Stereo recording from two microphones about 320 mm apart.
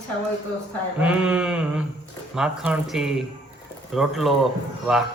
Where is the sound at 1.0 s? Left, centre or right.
Centre.